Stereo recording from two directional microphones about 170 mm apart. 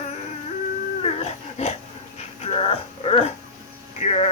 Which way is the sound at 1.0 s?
40° left (ahead or behind).